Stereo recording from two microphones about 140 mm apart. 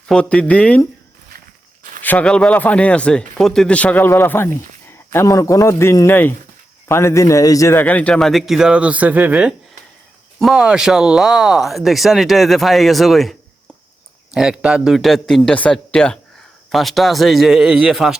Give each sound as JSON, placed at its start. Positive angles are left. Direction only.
{"t": 0.1, "sound": "speech", "side_deg": 10}
{"t": 2.0, "sound": "a man's voice", "side_deg": 10}
{"t": 14.3, "sound": "speech", "side_deg": -5}